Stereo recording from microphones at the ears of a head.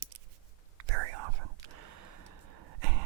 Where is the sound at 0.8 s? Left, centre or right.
Right.